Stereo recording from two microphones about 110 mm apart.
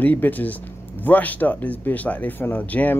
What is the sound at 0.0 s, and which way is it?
Speech, 15° left (ahead or behind).